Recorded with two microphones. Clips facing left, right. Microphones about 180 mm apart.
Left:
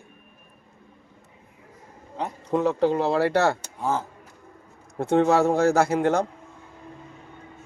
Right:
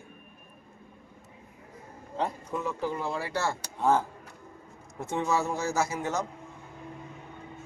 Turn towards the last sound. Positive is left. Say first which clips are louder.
# left 9 dB
turn(degrees=60)  # may be behind; listen again after turning